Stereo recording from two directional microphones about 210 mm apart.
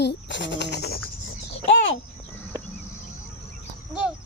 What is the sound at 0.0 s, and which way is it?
Speech, 55° left (ahead or behind).